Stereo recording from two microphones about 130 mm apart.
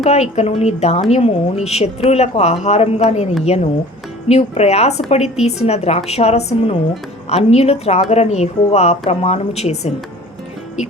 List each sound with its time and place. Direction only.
0.0 s speech: 55° left (ahead or behind)
4.3 s speech: 55° left (ahead or behind)